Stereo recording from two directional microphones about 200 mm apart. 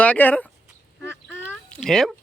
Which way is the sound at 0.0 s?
10° left (ahead or behind).